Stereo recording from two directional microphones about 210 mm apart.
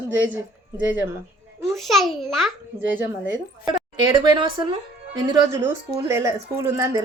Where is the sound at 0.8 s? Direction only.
10° right (ahead or behind).